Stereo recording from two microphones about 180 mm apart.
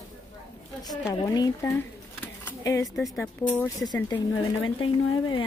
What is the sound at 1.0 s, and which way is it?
Speech, 20° left (ahead or behind).